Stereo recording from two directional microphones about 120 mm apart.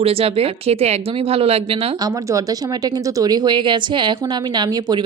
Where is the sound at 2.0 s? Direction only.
30° right (ahead or behind).